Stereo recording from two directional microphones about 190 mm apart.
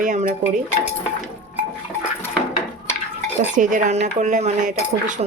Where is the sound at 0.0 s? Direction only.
40° right (ahead or behind).